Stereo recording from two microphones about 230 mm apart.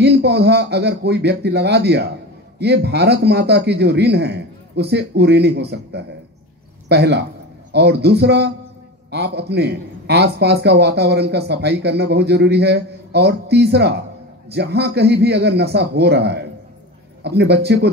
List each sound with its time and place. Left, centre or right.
0.0 s a man's voice: right